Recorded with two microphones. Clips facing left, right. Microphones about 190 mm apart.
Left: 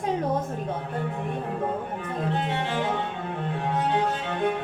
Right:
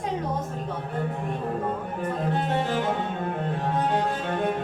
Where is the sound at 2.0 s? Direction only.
45° right (ahead or behind).